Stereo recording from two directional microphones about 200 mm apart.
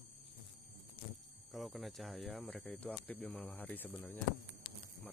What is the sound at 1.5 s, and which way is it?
Speech, centre (ahead or behind).